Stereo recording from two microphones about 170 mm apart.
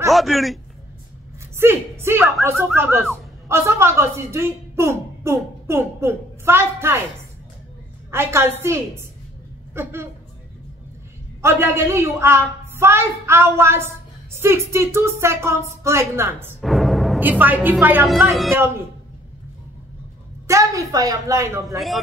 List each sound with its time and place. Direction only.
0.1 s a man's voice: centre (ahead or behind)
1.6 s a woman's voice: 15° right (ahead or behind)
8.1 s a woman's voice: 15° right (ahead or behind)
11.4 s a woman's voice: 15° right (ahead or behind)
16.6 s music: centre (ahead or behind)
17.2 s a woman's voice: 10° right (ahead or behind)
20.4 s a woman's voice: 20° right (ahead or behind)
21.7 s a man's voice: centre (ahead or behind)